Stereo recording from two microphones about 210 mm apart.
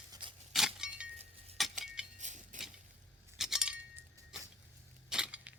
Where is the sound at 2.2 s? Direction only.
35° right (ahead or behind).